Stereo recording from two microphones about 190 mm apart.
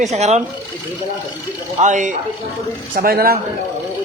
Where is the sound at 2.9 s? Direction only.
50° right (ahead or behind).